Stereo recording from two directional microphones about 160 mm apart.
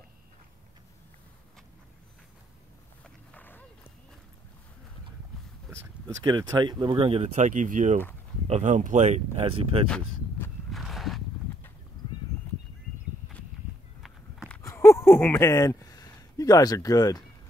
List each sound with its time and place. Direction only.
3.0 s a sound: 10° left (ahead or behind)
6.0 s speech: 25° right (ahead or behind)
9.8 s walk: 5° left (ahead or behind)
14.6 s speech: 15° left (ahead or behind)